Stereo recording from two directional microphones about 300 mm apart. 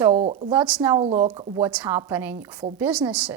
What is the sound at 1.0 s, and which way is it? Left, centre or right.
A woman's voice, centre.